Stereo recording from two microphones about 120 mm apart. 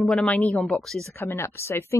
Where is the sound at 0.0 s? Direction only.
5° left (ahead or behind).